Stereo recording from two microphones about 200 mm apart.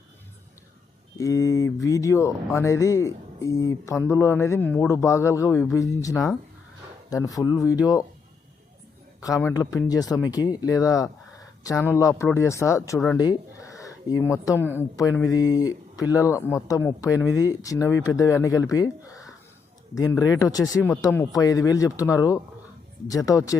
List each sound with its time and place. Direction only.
1.2 s speech: 15° left (ahead or behind)
9.2 s speech: 15° left (ahead or behind)
13.1 s a sound: 15° left (ahead or behind)
14.8 s speech: 15° left (ahead or behind)